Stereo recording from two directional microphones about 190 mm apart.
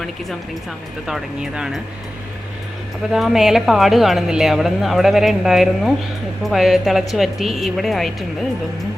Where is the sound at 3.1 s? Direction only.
Centre (ahead or behind).